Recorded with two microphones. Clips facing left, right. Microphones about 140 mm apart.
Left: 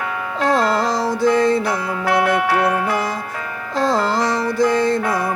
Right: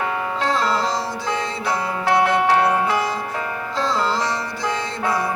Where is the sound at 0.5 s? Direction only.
50° left (ahead or behind).